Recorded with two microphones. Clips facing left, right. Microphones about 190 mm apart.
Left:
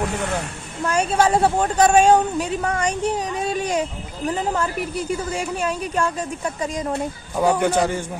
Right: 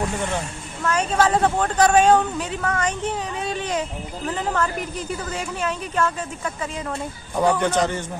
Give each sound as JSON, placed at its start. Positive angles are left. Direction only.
{"t": 0.9, "sound": "a woman's voice", "side_deg": 10}
{"t": 2.5, "sound": "speech", "side_deg": 30}
{"t": 3.5, "sound": "a woman's voice", "side_deg": 10}
{"t": 6.4, "sound": "speech", "side_deg": 35}
{"t": 7.3, "sound": "a woman's voice", "side_deg": 10}